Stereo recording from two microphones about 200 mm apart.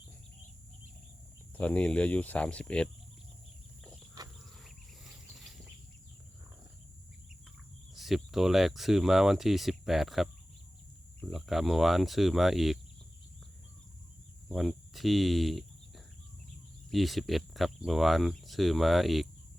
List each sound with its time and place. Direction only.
1.5 s speech: 5° left (ahead or behind)
7.9 s speech: centre (ahead or behind)
14.5 s speech: centre (ahead or behind)
16.9 s speech: centre (ahead or behind)